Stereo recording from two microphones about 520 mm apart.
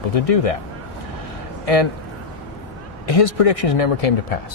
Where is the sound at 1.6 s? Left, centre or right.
Left.